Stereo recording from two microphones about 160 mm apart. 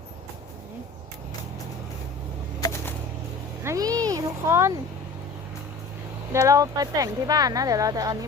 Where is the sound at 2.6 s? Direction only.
25° left (ahead or behind).